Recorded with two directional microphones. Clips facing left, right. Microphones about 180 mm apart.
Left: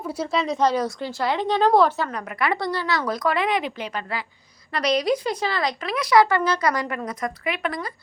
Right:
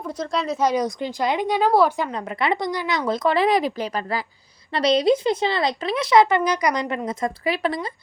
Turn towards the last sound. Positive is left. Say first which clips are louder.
# right 4 dB
turn(degrees=-30)  # may be behind; listen again after turning